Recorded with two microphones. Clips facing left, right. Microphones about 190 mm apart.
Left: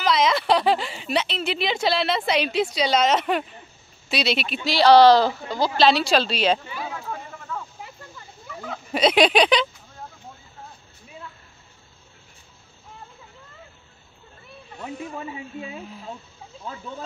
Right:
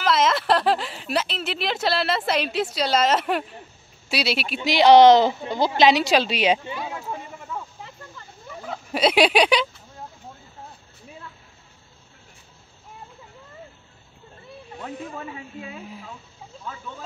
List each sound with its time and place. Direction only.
0.0 s speech: 5° right (ahead or behind)
4.6 s a woman's voice: 20° right (ahead or behind)
8.9 s speech: 5° right (ahead or behind)
14.8 s speech: 15° left (ahead or behind)